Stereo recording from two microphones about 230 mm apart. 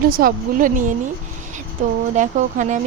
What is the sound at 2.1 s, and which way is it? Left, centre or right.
Speech, right.